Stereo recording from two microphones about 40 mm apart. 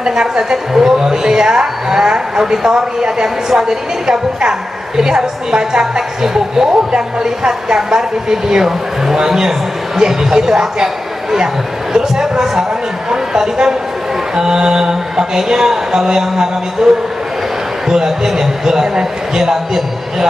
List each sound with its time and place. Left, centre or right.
0.0 s a woman's voice: centre